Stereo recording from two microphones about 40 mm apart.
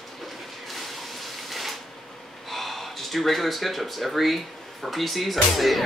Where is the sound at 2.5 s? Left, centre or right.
Centre.